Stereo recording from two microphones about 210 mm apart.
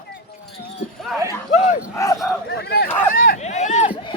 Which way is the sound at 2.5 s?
50° left (ahead or behind).